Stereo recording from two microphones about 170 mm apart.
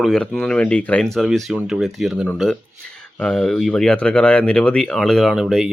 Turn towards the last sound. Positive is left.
turn(degrees=0)  # may be behind; listen again after turning